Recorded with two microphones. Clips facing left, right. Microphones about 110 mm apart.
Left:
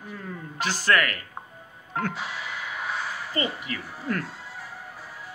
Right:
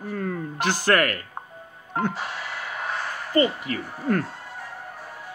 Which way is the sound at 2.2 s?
50° right (ahead or behind).